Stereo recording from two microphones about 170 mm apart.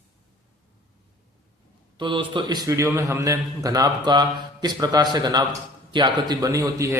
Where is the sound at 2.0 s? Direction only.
30° right (ahead or behind).